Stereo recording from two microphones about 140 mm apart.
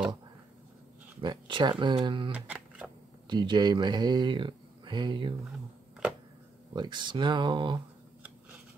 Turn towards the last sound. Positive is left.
turn(degrees=-35)  # may be behind; listen again after turning